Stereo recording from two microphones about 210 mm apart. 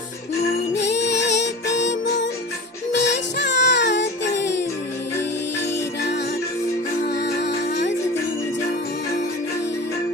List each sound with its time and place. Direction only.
0.7 s music: 55° left (ahead or behind)
7.1 s music: 50° left (ahead or behind)